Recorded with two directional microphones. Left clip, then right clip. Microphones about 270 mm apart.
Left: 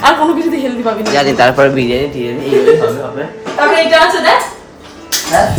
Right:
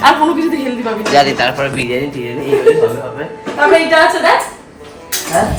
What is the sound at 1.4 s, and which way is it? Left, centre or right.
Speech, left.